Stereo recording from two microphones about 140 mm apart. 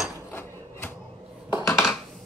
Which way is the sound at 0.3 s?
15° left (ahead or behind).